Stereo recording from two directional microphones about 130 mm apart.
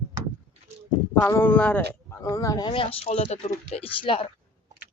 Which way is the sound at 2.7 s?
45° left (ahead or behind).